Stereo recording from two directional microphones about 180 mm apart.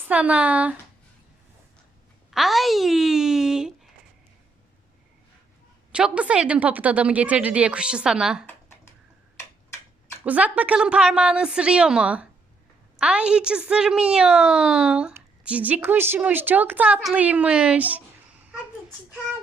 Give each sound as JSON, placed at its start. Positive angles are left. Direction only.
{"t": 0.1, "sound": "a woman's voice", "side_deg": -5}
{"t": 2.3, "sound": "a woman's voice", "side_deg": 0}
{"t": 5.9, "sound": "a woman's voice", "side_deg": -5}
{"t": 10.2, "sound": "a woman's voice", "side_deg": -10}